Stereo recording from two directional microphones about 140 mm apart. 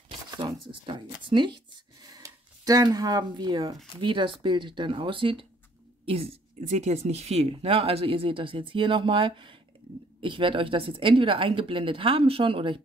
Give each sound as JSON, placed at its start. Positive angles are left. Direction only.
{"t": 0.3, "sound": "speech", "side_deg": -35}